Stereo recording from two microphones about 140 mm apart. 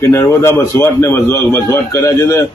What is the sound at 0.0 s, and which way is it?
A man's voice, 20° left (ahead or behind).